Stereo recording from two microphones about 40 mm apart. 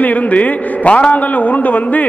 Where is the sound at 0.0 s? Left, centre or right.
Left.